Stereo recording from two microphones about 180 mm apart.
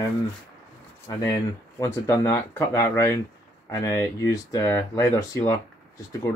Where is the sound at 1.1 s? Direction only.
20° left (ahead or behind).